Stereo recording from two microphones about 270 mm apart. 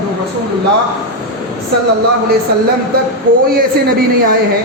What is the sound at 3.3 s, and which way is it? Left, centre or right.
Speech, right.